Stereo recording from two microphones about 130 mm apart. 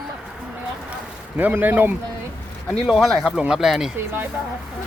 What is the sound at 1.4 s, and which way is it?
Speech, 15° right (ahead or behind).